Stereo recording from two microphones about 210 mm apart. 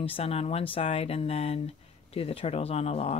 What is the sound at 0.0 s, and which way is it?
Speech, 30° left (ahead or behind).